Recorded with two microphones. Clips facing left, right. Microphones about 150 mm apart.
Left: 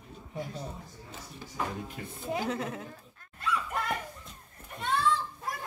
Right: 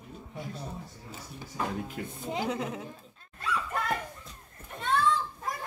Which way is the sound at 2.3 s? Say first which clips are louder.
Even; 15° right (ahead or behind).